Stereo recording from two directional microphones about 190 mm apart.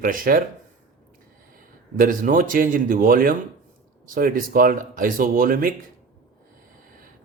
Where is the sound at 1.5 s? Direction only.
45° right (ahead or behind).